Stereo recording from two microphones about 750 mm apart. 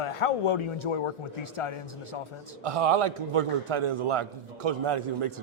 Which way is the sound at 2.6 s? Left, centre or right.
Right.